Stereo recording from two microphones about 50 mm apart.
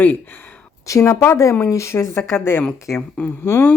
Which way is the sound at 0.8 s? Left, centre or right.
Left.